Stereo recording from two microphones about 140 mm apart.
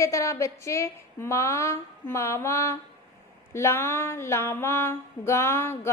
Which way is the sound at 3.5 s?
20° left (ahead or behind).